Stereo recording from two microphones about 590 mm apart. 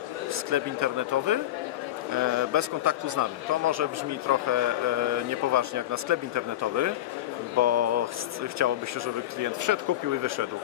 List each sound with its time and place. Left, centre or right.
0.5 s a man's voice: right